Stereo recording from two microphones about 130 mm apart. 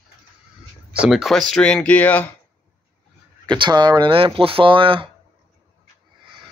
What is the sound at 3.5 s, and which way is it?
Speech, 35° right (ahead or behind).